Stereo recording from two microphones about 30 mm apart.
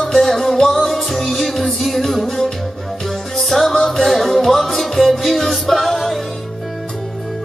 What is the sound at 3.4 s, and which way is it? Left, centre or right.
Music, centre.